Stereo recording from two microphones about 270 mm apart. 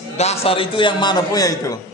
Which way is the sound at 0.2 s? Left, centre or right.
Left.